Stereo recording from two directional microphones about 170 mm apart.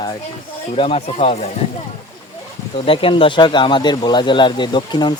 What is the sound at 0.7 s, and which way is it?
Speech, 35° left (ahead or behind).